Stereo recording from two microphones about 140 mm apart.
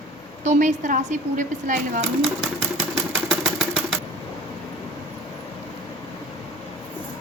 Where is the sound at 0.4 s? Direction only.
60° right (ahead or behind).